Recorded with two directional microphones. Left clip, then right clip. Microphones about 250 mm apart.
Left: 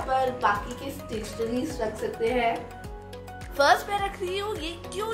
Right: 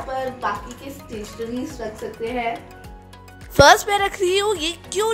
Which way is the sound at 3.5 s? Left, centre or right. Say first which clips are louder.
Right 9 dB; right.